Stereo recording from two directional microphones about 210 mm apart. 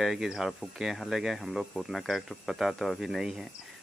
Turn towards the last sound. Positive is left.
turn(degrees=0)  # may be behind; listen again after turning